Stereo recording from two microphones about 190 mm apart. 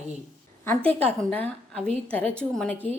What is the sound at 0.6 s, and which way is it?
A woman's voice, 10° left (ahead or behind).